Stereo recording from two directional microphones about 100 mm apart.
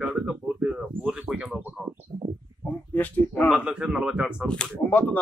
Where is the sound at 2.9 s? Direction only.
15° left (ahead or behind).